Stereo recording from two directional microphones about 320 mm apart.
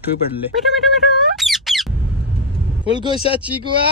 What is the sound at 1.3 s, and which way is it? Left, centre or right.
Squeak, centre.